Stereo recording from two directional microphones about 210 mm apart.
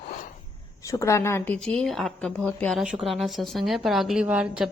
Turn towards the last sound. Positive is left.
turn(degrees=-5)  # may be behind; listen again after turning